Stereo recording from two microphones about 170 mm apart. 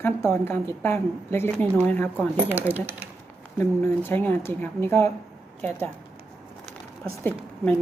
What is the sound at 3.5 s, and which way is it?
A woman's voice, 15° left (ahead or behind).